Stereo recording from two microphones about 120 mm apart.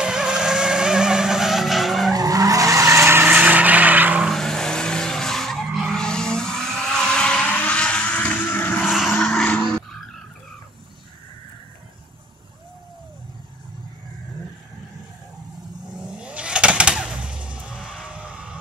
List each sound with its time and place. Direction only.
0.0 s vehicle: 5° right (ahead or behind)
2.1 s vehicle: 30° right (ahead or behind); by 4.3 s 15° right (ahead or behind)
4.3 s vehicle: 5° left (ahead or behind)
8.8 s vehicle: 5° right (ahead or behind)
9.1 s vehicle: 5° left (ahead or behind)
16.0 s vehicle: 10° right (ahead or behind)